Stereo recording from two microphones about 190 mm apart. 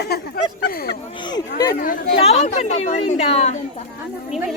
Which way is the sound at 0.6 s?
55° left (ahead or behind).